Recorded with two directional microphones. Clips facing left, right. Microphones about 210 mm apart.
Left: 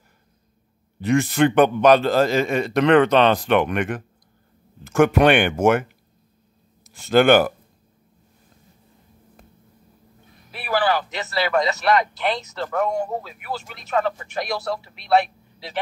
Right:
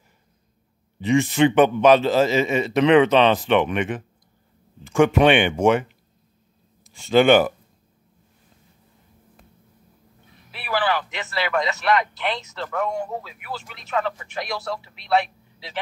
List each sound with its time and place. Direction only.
1.0 s a man's voice: centre (ahead or behind)
10.5 s speech: 45° left (ahead or behind)